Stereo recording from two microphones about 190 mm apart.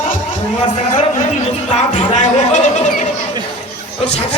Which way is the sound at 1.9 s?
40° left (ahead or behind).